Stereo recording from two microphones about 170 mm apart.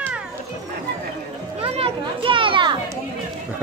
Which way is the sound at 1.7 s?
35° right (ahead or behind).